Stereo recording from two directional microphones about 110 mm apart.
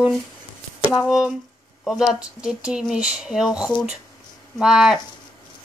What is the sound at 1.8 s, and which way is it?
Speech, 5° right (ahead or behind).